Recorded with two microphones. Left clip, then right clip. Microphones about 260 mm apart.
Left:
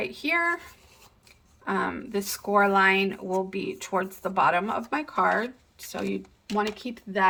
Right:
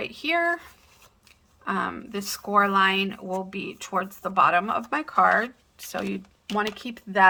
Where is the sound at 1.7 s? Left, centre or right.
Centre.